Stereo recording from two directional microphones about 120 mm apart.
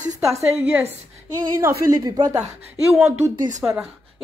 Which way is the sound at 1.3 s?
25° right (ahead or behind).